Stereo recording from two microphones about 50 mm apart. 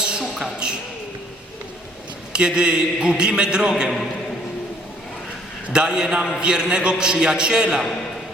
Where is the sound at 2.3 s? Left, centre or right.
Centre.